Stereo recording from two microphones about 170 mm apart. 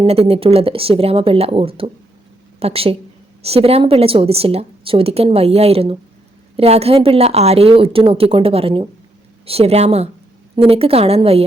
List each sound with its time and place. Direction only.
0.0 s speech: 35° right (ahead or behind)